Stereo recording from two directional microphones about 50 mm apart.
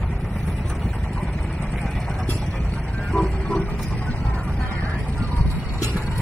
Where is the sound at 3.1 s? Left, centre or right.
Centre.